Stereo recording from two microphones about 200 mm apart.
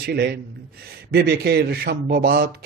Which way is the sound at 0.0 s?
55° right (ahead or behind).